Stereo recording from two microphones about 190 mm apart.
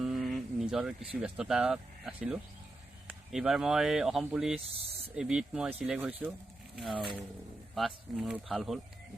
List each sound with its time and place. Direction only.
0.0 s speech: centre (ahead or behind)
4.6 s spray: 30° right (ahead or behind)
5.1 s speech: 5° right (ahead or behind)